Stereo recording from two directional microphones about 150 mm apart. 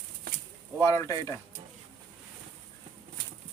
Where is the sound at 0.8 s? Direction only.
20° left (ahead or behind).